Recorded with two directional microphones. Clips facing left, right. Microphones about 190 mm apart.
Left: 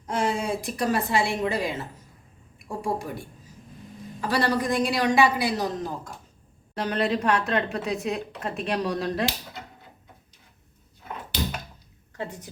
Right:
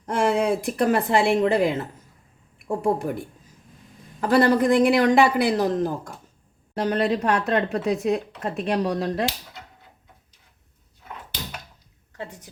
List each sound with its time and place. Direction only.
0.0 s speech: 55° right (ahead or behind)
2.8 s speech: 55° right (ahead or behind)
4.2 s speech: 50° right (ahead or behind)